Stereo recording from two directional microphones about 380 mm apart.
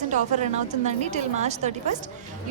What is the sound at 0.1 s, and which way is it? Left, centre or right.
A woman's voice, centre.